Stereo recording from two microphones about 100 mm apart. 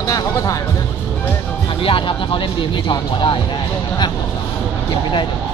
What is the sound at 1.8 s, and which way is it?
Speech, 60° left (ahead or behind).